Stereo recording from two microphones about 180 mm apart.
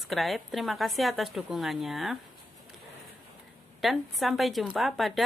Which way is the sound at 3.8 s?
Centre (ahead or behind).